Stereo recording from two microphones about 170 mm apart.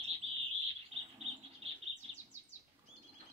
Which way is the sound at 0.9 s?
35° right (ahead or behind).